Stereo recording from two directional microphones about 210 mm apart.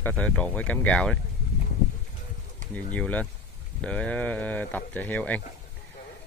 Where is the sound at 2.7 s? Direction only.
5° left (ahead or behind).